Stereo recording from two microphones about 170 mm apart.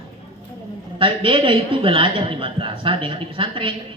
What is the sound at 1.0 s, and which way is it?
A man's voice, 30° right (ahead or behind).